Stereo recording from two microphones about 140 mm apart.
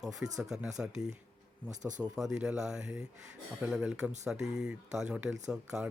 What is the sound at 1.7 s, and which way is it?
Speech, 60° right (ahead or behind).